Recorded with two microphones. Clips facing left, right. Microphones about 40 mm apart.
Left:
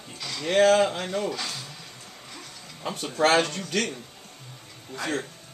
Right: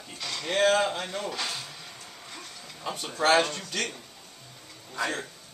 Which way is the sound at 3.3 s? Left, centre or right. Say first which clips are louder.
Even; centre.